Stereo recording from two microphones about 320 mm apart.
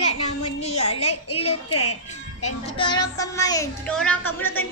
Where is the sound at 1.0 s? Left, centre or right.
Left.